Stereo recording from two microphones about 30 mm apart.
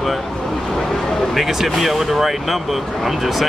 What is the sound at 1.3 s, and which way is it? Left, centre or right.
A man's voice, centre.